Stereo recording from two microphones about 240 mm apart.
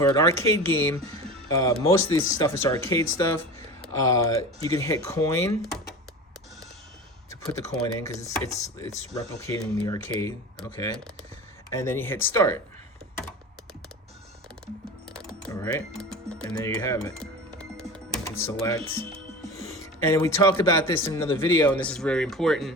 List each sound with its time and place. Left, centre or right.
0.0 s speech: centre
7.3 s speech: centre
11.7 s speech: centre
15.1 s music: centre
19.1 s music: right
19.7 s speech: centre